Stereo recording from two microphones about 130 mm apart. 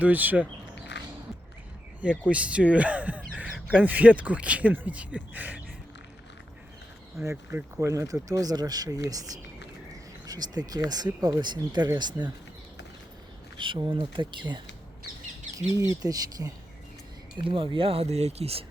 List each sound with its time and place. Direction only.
0.0 s speech: 10° right (ahead or behind)
2.0 s speech: 10° right (ahead or behind)
7.3 s speech: 20° right (ahead or behind)
13.6 s speech: 35° right (ahead or behind)
16.0 s speech: 45° left (ahead or behind)
16.4 s speech: 20° right (ahead or behind)
17.3 s speech: 40° right (ahead or behind)